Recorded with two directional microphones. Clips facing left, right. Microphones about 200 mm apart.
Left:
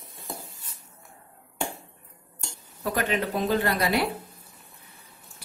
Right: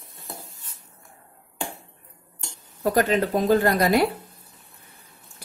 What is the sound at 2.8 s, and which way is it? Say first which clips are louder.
Speech: right 6 dB; 40° right (ahead or behind).